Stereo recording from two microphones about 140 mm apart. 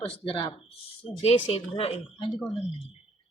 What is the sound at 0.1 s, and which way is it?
Speech, 40° left (ahead or behind).